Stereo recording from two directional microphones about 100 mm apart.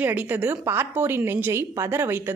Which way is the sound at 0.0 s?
15° right (ahead or behind).